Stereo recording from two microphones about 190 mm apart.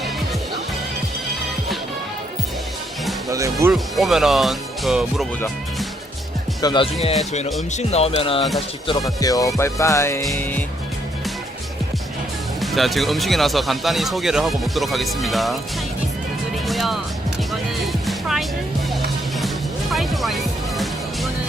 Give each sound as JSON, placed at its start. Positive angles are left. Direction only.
{"t": 3.2, "sound": "speech", "side_deg": -15}
{"t": 3.7, "sound": "speech", "side_deg": 0}
{"t": 6.6, "sound": "music", "side_deg": 25}
{"t": 7.7, "sound": "speech", "side_deg": 35}
{"t": 8.9, "sound": "music", "side_deg": 20}
{"t": 12.5, "sound": "speech", "side_deg": 0}
{"t": 16.6, "sound": "music", "side_deg": 0}
{"t": 19.9, "sound": "music", "side_deg": 0}